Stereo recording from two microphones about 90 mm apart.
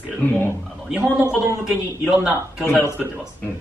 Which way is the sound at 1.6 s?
5° right (ahead or behind).